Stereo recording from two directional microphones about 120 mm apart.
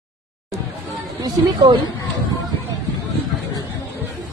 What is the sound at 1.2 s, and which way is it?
Speech, 35° right (ahead or behind).